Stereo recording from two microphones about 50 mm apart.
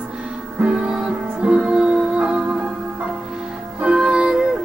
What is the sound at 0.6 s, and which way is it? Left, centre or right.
Music, centre.